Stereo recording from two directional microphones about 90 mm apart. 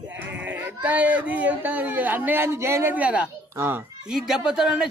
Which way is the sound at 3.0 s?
15° right (ahead or behind).